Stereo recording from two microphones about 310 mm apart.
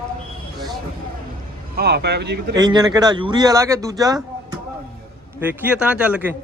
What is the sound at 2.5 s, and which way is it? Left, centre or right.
A man's voice, centre.